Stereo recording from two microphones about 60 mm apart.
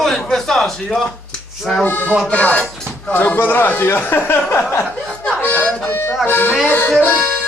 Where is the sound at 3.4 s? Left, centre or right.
Left.